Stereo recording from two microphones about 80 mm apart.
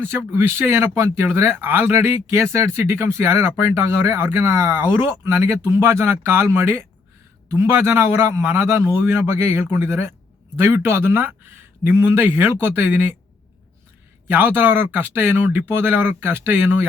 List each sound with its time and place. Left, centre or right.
0.0 s speech: right
14.3 s speech: right